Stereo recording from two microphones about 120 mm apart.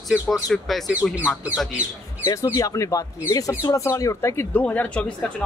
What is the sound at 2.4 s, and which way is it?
Speech, 30° left (ahead or behind).